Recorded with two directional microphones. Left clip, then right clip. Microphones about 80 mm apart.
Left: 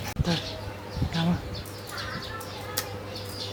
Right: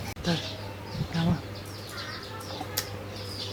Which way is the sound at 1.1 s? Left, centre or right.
Centre.